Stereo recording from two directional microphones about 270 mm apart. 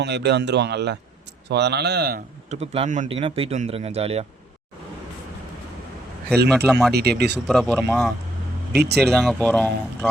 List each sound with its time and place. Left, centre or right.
0.0 s a man's voice: right
6.5 s speech: centre
6.9 s a man's voice: right
7.3 s speech: centre